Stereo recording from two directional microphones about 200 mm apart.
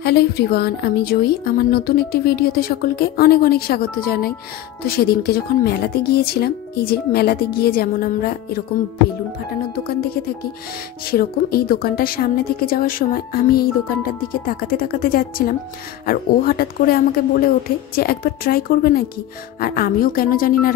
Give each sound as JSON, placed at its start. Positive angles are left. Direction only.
{"t": 0.0, "sound": "a woman's voice", "side_deg": 55}
{"t": 9.8, "sound": "a woman's voice", "side_deg": 50}